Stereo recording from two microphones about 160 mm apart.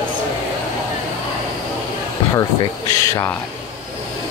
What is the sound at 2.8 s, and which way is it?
Speech, 20° left (ahead or behind).